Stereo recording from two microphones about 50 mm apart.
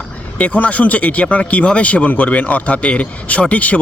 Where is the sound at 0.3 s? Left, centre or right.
Left.